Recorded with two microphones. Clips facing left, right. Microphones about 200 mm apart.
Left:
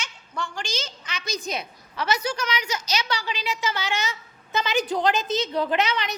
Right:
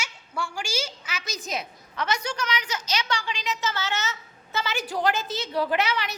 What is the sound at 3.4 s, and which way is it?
A woman's voice, 10° left (ahead or behind).